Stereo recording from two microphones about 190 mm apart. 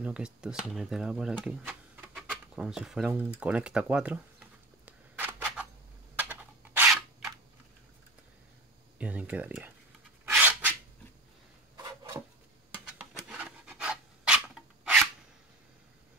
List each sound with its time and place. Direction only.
0.0 s speech: 5° right (ahead or behind)
6.1 s a sound: 10° right (ahead or behind)
8.9 s speech: 5° right (ahead or behind)
10.2 s rub: 10° right (ahead or behind)
11.7 s a sound: 20° right (ahead or behind)
12.7 s pant: 5° right (ahead or behind)